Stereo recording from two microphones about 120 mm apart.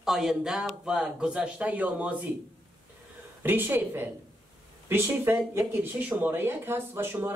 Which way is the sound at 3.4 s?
15° right (ahead or behind).